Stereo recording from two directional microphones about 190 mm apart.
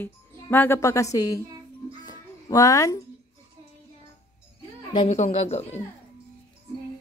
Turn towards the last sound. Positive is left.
turn(degrees=35)  # may be behind; listen again after turning